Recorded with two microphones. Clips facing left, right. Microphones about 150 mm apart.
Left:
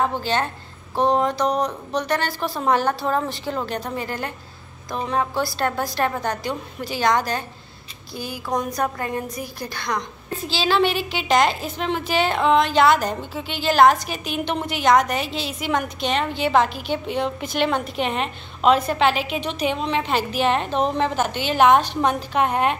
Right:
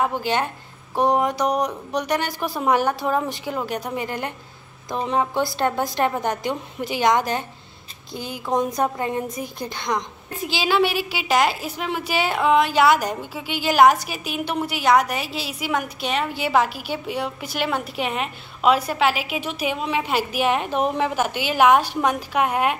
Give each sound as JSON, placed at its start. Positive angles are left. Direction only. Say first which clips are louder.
{"t": 0.0, "sound": "a woman's voice", "louder": "even", "side_deg": -15}